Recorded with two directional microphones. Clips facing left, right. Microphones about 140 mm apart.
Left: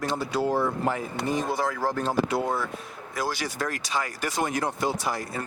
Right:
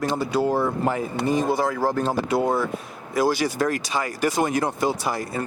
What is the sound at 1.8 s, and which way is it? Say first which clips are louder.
Speech: right 4 dB; 35° right (ahead or behind).